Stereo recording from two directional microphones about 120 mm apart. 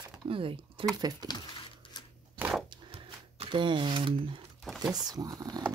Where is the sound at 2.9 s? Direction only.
50° right (ahead or behind).